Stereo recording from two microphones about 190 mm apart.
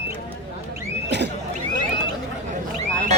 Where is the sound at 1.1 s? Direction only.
65° right (ahead or behind).